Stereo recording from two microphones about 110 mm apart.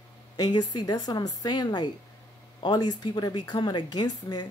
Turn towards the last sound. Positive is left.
turn(degrees=40)  # may be behind; listen again after turning